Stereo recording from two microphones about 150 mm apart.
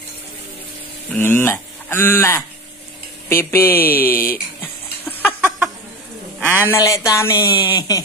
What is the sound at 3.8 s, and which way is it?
Speech, 75° left (ahead or behind).